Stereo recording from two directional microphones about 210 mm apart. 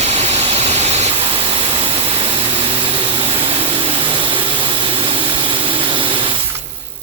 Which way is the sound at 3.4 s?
25° right (ahead or behind).